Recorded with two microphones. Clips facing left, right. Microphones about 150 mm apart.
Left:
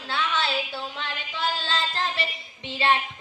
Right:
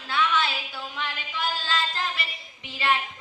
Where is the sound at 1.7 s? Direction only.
30° left (ahead or behind).